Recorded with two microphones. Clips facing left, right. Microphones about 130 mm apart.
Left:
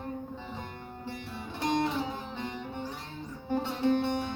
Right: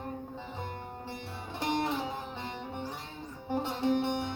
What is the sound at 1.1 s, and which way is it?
Music, 25° right (ahead or behind).